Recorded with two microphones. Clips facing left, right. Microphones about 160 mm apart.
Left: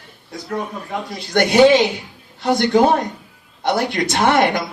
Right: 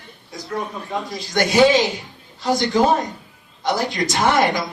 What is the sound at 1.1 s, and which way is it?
A man's voice, 60° left (ahead or behind).